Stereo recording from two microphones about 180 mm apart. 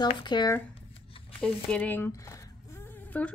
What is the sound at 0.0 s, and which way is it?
Speech, 25° left (ahead or behind).